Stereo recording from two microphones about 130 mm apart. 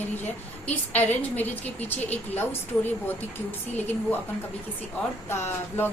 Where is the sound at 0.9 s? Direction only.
15° left (ahead or behind).